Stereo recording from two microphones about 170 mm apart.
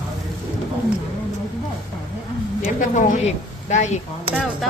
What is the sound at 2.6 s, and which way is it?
A woman's voice, 45° left (ahead or behind).